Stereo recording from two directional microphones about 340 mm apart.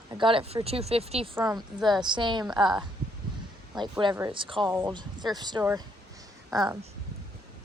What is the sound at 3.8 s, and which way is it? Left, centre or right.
A woman's voice, centre.